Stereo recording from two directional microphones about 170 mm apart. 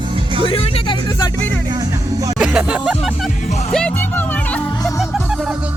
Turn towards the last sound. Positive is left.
turn(degrees=5)  # may be behind; listen again after turning